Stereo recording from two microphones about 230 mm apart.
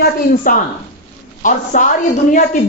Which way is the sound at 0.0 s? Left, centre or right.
Left.